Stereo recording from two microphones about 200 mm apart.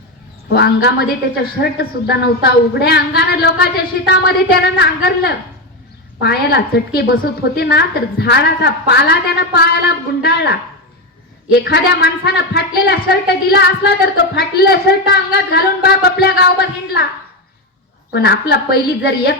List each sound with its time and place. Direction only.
0.5 s a woman's voice: 55° left (ahead or behind)
11.6 s a woman's voice: 55° left (ahead or behind)
18.1 s a woman's voice: 55° left (ahead or behind)